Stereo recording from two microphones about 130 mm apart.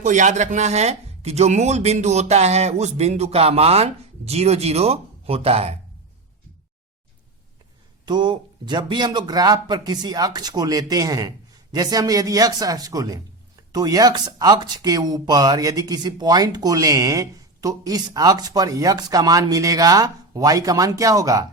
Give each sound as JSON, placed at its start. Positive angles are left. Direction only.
{"t": 0.0, "sound": "speech", "side_deg": -75}
{"t": 8.0, "sound": "a man's voice", "side_deg": -35}